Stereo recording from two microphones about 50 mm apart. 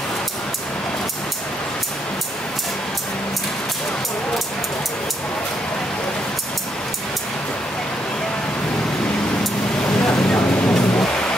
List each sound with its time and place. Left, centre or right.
9.9 s vehicle: centre